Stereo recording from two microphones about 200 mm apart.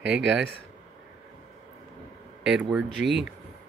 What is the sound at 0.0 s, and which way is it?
Speech, 65° right (ahead or behind).